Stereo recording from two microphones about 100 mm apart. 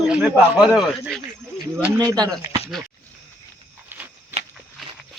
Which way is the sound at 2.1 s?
40° right (ahead or behind).